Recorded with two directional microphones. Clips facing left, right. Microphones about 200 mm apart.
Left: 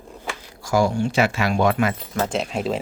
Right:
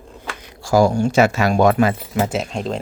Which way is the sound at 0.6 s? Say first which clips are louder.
Right 5 dB; 40° right (ahead or behind).